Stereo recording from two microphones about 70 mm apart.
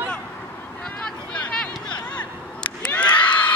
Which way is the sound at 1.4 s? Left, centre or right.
Centre.